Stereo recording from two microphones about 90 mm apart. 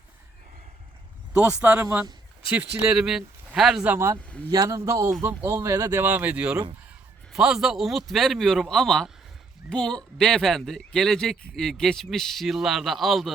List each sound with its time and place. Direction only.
1.3 s speech: 15° right (ahead or behind)
3.8 s speech: 25° right (ahead or behind)
4.5 s a man's voice: 40° right (ahead or behind)
6.0 s speech: 20° right (ahead or behind); by 13.3 s centre (ahead or behind)